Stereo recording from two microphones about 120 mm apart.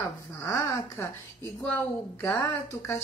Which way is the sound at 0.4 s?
25° left (ahead or behind).